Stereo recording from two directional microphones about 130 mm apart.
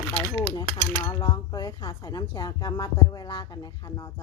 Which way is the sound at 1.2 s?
30° left (ahead or behind).